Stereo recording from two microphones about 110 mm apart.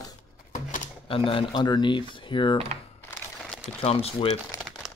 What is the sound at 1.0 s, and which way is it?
Speech, 55° left (ahead or behind).